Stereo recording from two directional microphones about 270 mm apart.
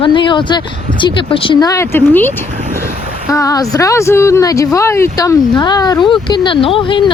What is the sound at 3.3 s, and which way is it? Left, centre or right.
Speech, centre.